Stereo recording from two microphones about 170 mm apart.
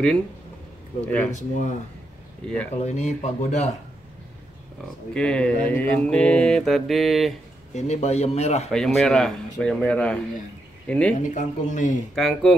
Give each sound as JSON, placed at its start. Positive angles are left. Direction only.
{"t": 1.0, "sound": "speech", "side_deg": 10}
{"t": 1.3, "sound": "speech", "side_deg": 45}
{"t": 2.4, "sound": "speech", "side_deg": 5}
{"t": 2.7, "sound": "speech", "side_deg": 40}
{"t": 5.1, "sound": "mantra", "side_deg": 5}
{"t": 7.7, "sound": "speech", "side_deg": 40}
{"t": 8.6, "sound": "mantra", "side_deg": 0}
{"t": 10.9, "sound": "speech", "side_deg": 5}
{"t": 11.3, "sound": "speech", "side_deg": 45}
{"t": 12.2, "sound": "mantra", "side_deg": 0}